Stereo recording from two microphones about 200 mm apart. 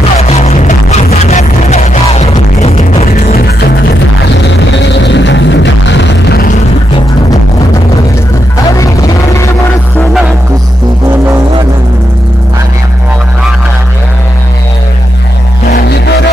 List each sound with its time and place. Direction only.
0.2 s music: 35° left (ahead or behind); by 6.5 s 55° left (ahead or behind)